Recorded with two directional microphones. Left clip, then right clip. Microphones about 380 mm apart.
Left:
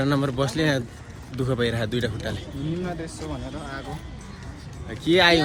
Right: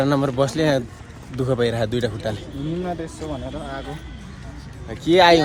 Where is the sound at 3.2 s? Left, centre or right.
Right.